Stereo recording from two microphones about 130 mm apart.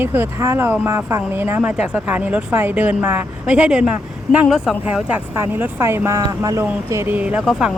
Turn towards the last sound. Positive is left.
turn(degrees=-10)  # may be behind; listen again after turning